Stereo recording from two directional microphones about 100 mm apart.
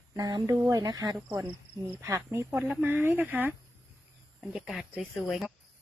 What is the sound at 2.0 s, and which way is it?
Speech, 25° right (ahead or behind).